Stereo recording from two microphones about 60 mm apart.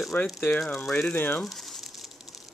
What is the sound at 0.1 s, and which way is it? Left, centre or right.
Speech, left.